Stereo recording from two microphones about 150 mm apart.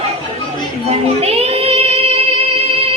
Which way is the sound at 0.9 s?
45° right (ahead or behind).